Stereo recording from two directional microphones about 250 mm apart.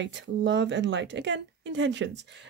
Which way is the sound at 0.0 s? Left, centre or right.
Right.